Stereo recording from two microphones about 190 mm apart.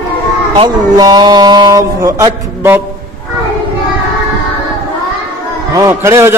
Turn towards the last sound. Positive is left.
turn(degrees=-15)  # may be behind; listen again after turning